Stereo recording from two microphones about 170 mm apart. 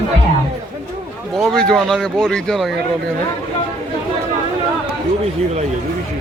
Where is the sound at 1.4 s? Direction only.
5° left (ahead or behind).